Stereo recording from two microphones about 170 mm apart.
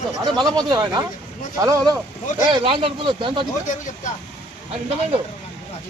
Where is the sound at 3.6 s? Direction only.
45° left (ahead or behind).